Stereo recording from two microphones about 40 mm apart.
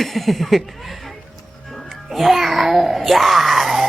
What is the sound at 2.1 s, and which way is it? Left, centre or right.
Babbling, centre.